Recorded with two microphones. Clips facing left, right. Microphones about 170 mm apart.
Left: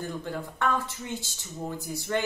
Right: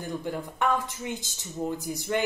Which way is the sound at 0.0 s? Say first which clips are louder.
Right 1 dB; 15° right (ahead or behind).